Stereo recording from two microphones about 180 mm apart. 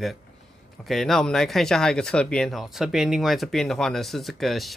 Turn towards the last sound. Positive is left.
turn(degrees=0)  # may be behind; listen again after turning